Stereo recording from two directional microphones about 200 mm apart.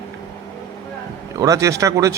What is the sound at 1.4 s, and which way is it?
Speech, 15° right (ahead or behind).